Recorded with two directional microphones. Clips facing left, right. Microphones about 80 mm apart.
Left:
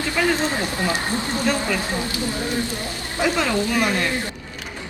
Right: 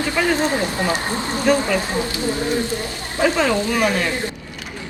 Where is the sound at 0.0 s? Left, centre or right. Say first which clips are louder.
Right 2 dB; right.